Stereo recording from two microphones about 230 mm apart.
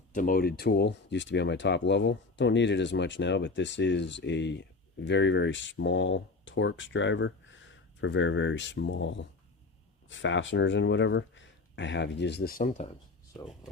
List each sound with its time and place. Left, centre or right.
0.1 s speech: left